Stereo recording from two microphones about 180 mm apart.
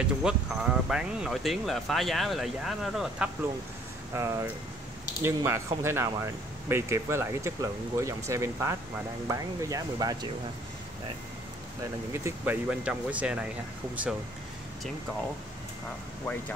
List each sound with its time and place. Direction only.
0.0 s speech: 5° right (ahead or behind)
4.1 s speech: 15° right (ahead or behind)
12.1 s speech: 15° right (ahead or behind)